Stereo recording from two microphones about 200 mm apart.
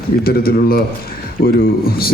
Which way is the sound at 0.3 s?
50° left (ahead or behind).